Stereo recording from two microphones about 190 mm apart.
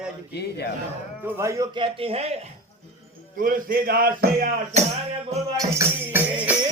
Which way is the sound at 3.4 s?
45° right (ahead or behind).